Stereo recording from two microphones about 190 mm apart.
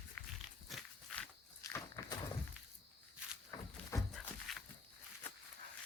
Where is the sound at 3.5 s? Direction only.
20° left (ahead or behind).